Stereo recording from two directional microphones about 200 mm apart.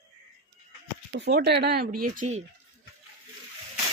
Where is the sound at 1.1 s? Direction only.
55° right (ahead or behind).